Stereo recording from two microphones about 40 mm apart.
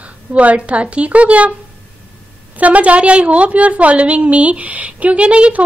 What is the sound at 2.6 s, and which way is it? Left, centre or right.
Speech, right.